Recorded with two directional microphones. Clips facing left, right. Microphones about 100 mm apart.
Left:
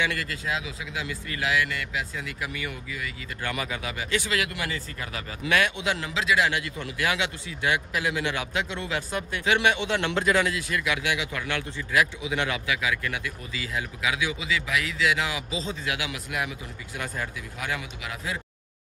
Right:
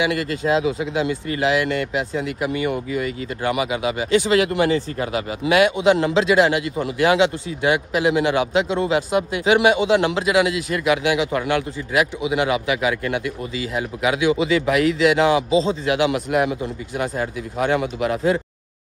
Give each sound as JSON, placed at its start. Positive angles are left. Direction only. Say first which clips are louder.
{"t": 0.0, "sound": "a man's voice", "louder": "right 8 dB", "side_deg": -20}
{"t": 3.4, "sound": "a man's voice", "louder": "right 10 dB", "side_deg": -20}
{"t": 6.0, "sound": "a man's voice", "louder": "right 9 dB", "side_deg": -35}
{"t": 10.8, "sound": "a man's voice", "louder": "right 12 dB", "side_deg": -25}
{"t": 14.2, "sound": "speech", "louder": "right 11 dB", "side_deg": -45}